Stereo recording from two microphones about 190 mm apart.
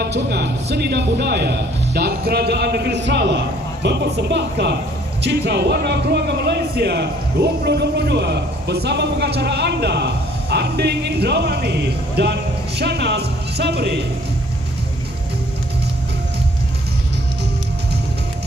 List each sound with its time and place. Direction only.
0.0 s speech: 60° right (ahead or behind)